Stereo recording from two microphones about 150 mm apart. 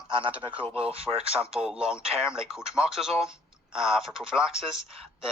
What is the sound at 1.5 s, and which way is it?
Speech, 5° right (ahead or behind).